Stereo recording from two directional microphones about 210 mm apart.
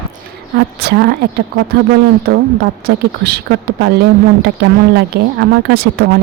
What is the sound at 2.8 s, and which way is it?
Speech, 50° right (ahead or behind).